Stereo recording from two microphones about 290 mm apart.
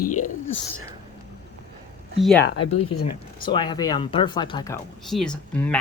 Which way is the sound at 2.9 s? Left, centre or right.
Left.